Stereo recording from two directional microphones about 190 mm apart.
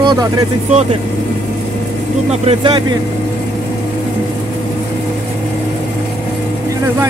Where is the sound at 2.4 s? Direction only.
30° right (ahead or behind).